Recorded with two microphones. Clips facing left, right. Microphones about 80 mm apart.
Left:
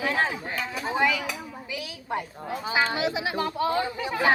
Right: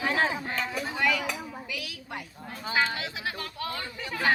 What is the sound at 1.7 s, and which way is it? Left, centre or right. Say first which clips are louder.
Speech: left 11 dB; left.